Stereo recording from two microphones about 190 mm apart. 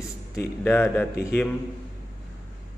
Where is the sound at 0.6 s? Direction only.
10° left (ahead or behind).